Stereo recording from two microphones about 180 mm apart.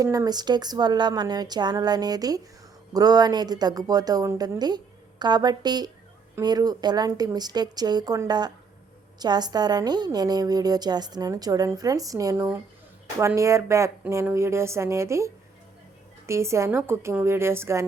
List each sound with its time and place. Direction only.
0.0 s a woman's voice: 20° right (ahead or behind)